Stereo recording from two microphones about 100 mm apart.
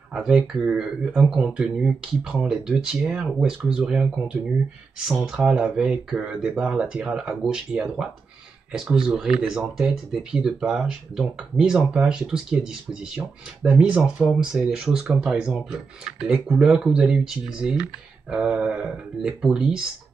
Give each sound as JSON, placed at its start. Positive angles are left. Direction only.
{"t": 0.1, "sound": "speech", "side_deg": -10}